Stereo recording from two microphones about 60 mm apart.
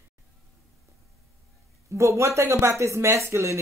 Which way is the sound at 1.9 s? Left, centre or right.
Right.